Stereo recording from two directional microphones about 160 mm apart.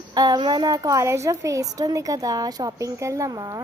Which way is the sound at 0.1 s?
25° right (ahead or behind).